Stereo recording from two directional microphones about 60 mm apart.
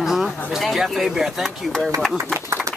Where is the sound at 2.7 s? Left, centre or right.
Right.